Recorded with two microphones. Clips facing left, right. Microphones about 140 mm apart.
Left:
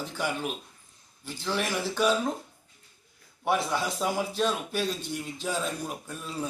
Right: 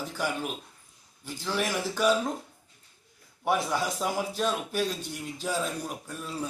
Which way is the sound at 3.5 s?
10° right (ahead or behind).